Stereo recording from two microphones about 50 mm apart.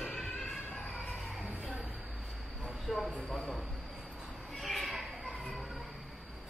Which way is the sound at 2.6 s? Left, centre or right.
Centre.